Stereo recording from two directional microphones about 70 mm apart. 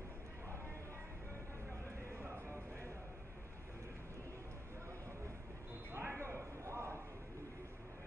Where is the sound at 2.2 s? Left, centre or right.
Right.